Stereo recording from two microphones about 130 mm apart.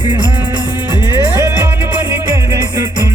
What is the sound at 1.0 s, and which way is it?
Music, 20° right (ahead or behind).